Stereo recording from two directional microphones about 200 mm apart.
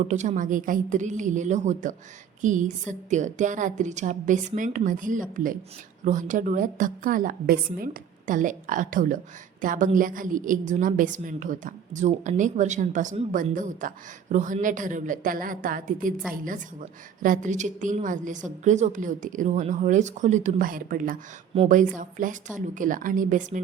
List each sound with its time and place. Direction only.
0.0 s a woman's voice: 35° right (ahead or behind)